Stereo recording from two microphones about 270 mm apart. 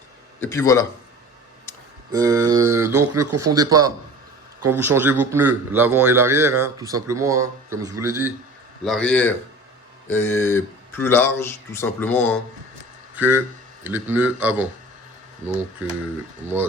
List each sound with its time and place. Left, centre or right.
0.3 s speech: centre
2.1 s a man's voice: centre
2.8 s speech: right
3.5 s a man's voice: centre
8.8 s speech: centre
13.1 s speech: centre